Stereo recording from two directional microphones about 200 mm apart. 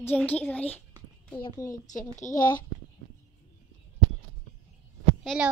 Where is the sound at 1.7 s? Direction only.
40° left (ahead or behind).